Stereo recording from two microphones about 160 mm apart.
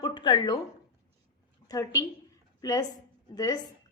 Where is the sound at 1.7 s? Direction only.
20° left (ahead or behind).